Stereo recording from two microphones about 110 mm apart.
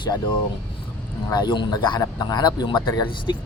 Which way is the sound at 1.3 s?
40° left (ahead or behind).